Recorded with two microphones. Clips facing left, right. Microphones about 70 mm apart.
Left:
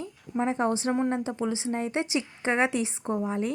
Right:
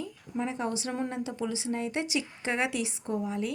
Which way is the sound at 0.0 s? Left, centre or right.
Left.